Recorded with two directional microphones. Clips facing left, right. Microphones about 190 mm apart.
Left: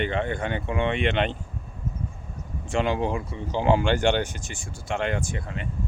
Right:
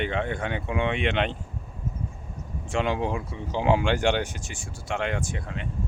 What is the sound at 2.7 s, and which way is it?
Speech, centre (ahead or behind).